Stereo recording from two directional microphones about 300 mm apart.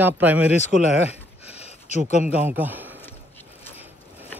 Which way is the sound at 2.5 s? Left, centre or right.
Centre.